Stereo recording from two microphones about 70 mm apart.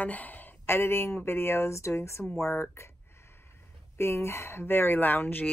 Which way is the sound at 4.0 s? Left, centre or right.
Left.